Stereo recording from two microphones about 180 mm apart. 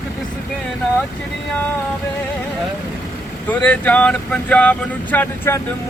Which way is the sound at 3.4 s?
10° left (ahead or behind).